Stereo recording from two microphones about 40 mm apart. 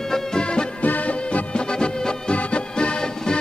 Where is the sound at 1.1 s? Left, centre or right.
Left.